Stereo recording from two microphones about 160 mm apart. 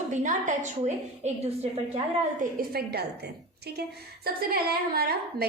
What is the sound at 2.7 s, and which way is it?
Speech, 80° right.